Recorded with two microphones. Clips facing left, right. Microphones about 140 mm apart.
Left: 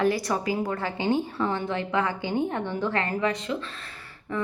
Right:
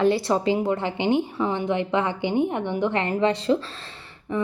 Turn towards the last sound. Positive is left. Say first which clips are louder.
# right 4 dB
turn(degrees=-25)  # may be behind; listen again after turning